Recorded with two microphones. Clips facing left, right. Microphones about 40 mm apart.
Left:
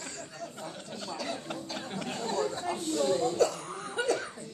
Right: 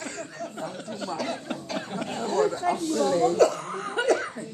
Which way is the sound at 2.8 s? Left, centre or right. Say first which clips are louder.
Right 1 dB; centre.